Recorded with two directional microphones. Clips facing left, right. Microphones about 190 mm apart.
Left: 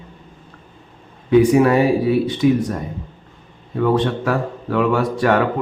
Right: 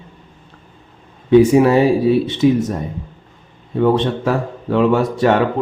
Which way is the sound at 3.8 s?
25° right (ahead or behind).